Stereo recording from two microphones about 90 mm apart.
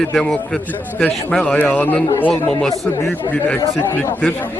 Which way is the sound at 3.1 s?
20° left (ahead or behind).